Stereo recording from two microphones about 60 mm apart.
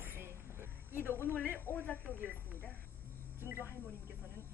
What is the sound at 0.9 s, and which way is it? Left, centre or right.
Speech, left.